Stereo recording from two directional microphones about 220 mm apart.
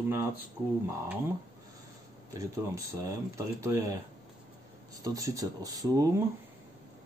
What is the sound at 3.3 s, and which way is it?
Speech, 15° right (ahead or behind).